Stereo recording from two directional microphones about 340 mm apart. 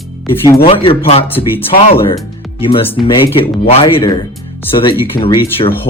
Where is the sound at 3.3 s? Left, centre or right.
Centre.